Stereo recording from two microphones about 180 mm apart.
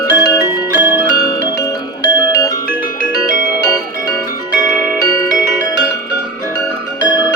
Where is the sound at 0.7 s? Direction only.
10° right (ahead or behind).